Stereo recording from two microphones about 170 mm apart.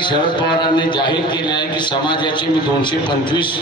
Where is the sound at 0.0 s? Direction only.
25° left (ahead or behind).